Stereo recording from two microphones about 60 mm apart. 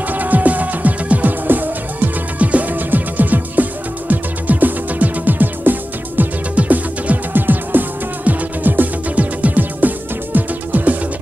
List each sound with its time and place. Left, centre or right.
0.1 s music: right